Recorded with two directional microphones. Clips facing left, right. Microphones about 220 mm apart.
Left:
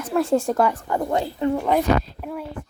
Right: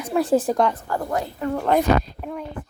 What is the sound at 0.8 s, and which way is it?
Speech, 20° left (ahead or behind).